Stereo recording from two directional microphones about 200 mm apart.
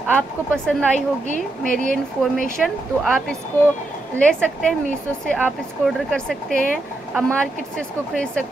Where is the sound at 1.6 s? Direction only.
40° right (ahead or behind).